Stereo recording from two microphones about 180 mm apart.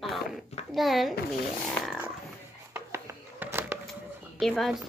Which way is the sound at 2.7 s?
15° right (ahead or behind).